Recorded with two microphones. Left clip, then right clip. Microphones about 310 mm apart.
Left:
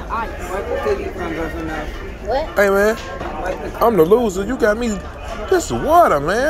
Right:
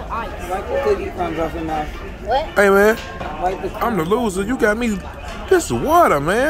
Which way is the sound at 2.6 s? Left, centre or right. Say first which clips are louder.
Right 2 dB; centre.